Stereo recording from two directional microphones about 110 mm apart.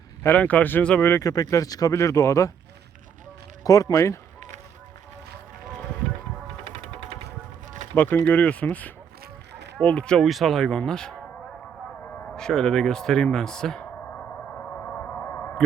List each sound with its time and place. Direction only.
0.2 s speech: 15° left (ahead or behind)
1.2 s speech: 35° left (ahead or behind)
3.6 s speech: 35° left (ahead or behind)
6.7 s music: 75° right (ahead or behind)
7.9 s speech: 15° left (ahead or behind)
12.2 s a sound: 5° left (ahead or behind)